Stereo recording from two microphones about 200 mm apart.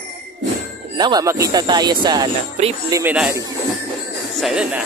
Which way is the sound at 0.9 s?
20° right (ahead or behind).